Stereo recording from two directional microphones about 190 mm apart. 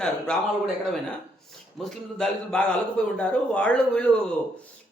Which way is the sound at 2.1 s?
5° left (ahead or behind).